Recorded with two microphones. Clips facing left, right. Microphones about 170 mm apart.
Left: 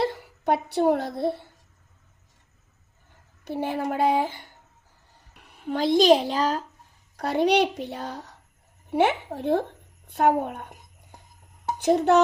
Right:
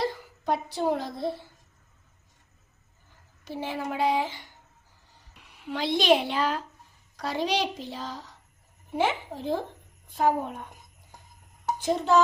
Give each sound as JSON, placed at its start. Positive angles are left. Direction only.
{"t": 0.0, "sound": "speech", "side_deg": 65}
{"t": 3.4, "sound": "a woman's voice", "side_deg": 55}
{"t": 7.2, "sound": "a woman's voice", "side_deg": 60}
{"t": 11.8, "sound": "a woman's voice", "side_deg": 60}